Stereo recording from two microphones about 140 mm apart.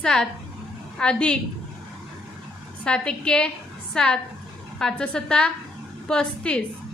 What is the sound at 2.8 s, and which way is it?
A woman's voice, 5° left (ahead or behind).